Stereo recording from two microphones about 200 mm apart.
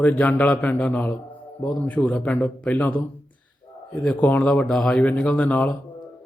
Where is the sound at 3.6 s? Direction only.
25° left (ahead or behind).